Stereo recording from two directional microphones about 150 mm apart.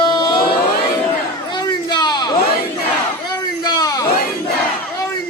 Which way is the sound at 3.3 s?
25° left (ahead or behind).